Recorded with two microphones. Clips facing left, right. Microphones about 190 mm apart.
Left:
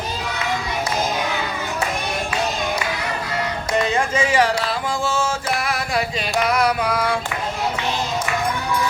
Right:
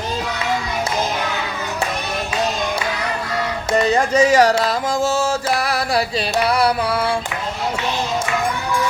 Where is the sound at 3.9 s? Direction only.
40° right (ahead or behind).